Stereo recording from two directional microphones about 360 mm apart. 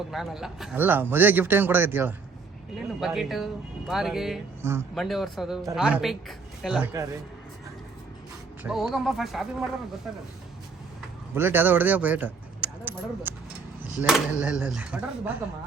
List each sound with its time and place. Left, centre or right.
0.1 s speech: centre
8.6 s speech: centre
11.3 s speech: centre